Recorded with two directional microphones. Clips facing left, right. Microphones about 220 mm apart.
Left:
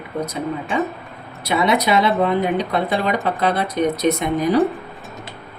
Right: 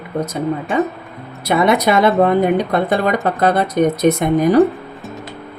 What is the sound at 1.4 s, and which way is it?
Speech, 50° right (ahead or behind).